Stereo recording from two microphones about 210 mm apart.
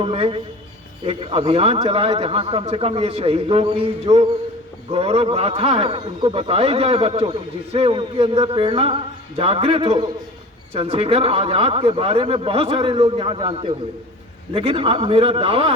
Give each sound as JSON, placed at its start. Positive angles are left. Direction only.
{"t": 0.0, "sound": "a man's voice", "side_deg": -25}